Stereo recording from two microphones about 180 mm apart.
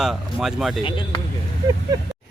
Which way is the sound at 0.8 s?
30° left (ahead or behind).